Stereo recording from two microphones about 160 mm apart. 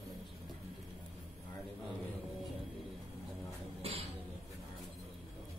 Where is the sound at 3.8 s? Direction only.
35° right (ahead or behind).